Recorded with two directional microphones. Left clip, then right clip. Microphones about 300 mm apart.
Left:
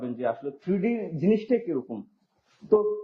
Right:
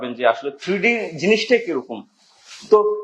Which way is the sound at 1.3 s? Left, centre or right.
Centre.